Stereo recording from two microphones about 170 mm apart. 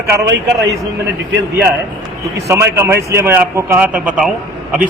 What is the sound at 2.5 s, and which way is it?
A man's voice, 15° right (ahead or behind).